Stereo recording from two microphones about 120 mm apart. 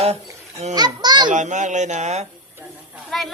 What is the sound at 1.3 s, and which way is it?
Speech, 90° right.